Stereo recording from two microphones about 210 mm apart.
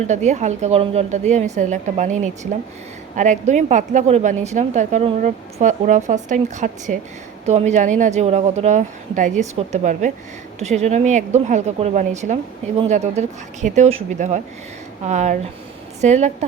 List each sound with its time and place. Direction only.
0.1 s a woman's voice: 35° right (ahead or behind)